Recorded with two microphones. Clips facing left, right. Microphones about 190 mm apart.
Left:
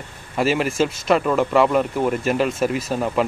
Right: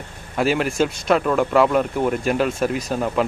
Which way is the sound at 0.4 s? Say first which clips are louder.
Even; centre (ahead or behind).